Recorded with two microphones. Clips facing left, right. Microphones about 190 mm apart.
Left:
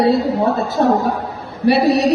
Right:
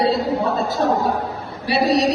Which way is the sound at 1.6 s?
55° left (ahead or behind).